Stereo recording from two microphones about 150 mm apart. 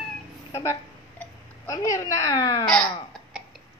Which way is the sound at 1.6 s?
25° left (ahead or behind).